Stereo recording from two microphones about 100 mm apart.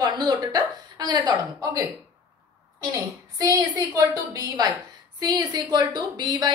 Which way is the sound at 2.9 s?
35° right (ahead or behind).